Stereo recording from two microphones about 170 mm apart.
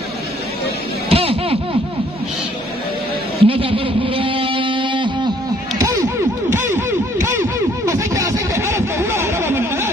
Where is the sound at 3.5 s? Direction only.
30° right (ahead or behind).